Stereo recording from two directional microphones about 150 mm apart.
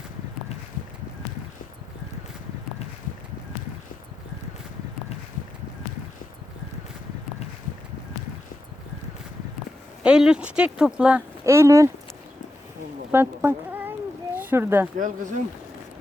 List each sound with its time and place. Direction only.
10.0 s speech: 5° right (ahead or behind)
11.4 s speech: 20° right (ahead or behind)
13.1 s a sound: 15° right (ahead or behind)
14.3 s speech: 15° right (ahead or behind)
14.9 s speech: 60° right (ahead or behind)